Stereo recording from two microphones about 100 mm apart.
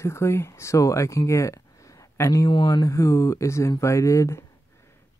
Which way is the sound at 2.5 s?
50° left (ahead or behind).